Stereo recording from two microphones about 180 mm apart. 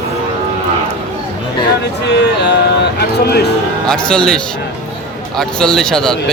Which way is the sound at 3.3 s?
65° left (ahead or behind).